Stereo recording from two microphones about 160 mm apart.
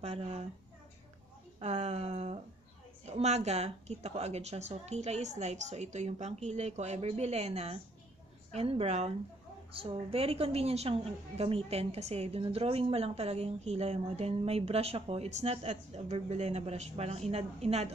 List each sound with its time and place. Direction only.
0.0 s a woman's voice: 40° right (ahead or behind)
1.6 s a woman's voice: 45° right (ahead or behind)